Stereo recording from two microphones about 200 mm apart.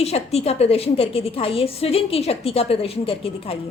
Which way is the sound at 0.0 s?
30° left (ahead or behind).